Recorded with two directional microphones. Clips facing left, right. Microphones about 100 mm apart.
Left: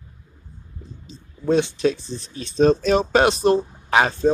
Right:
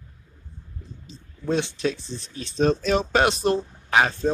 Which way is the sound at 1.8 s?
35° left (ahead or behind).